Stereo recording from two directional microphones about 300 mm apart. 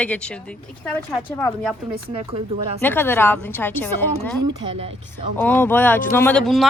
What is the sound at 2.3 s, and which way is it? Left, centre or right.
Speech, centre.